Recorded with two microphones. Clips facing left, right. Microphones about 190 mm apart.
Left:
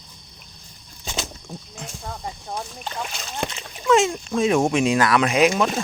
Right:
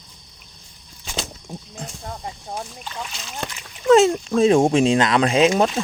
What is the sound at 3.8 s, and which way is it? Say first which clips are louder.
Speech: right 5 dB; 35° right (ahead or behind).